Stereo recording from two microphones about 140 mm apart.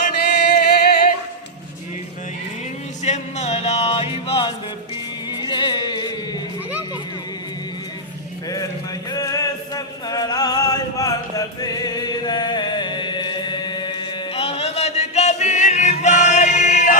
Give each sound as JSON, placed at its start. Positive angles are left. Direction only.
{"t": 0.1, "sound": "music", "side_deg": 90}
{"t": 3.0, "sound": "music", "side_deg": 55}
{"t": 9.1, "sound": "music", "side_deg": 25}